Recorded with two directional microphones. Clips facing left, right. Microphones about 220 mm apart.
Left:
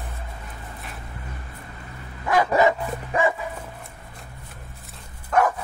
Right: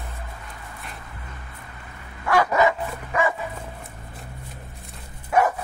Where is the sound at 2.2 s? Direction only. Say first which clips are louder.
Even; 20° left (ahead or behind).